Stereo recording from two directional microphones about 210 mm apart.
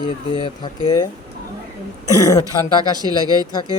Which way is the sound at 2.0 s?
15° left (ahead or behind).